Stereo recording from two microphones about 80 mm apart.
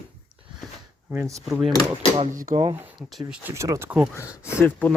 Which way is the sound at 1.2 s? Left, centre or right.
Right.